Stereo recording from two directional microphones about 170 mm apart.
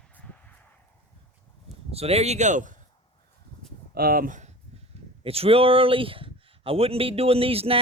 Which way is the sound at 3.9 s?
60° right (ahead or behind).